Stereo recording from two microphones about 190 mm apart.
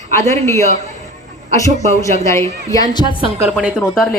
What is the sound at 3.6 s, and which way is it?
Speech, 5° left (ahead or behind).